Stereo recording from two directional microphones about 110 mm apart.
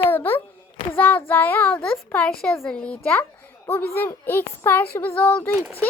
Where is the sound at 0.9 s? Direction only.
15° left (ahead or behind).